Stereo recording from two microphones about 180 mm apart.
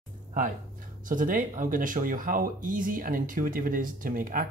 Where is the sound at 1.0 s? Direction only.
50° right (ahead or behind).